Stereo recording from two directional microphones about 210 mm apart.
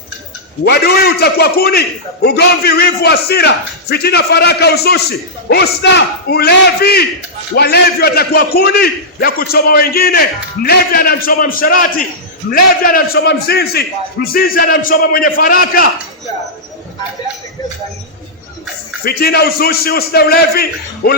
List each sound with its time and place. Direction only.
0.6 s a man's voice: 50° left (ahead or behind)
19.0 s a man's voice: 45° left (ahead or behind)